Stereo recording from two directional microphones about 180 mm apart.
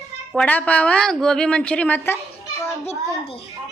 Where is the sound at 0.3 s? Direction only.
10° left (ahead or behind).